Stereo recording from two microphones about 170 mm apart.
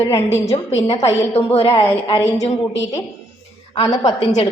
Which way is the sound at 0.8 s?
35° left (ahead or behind).